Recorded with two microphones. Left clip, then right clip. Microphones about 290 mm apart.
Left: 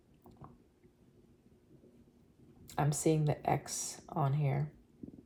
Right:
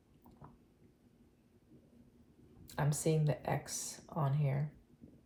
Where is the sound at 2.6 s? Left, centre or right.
Left.